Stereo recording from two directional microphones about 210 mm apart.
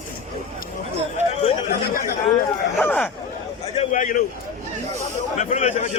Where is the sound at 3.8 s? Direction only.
35° left (ahead or behind).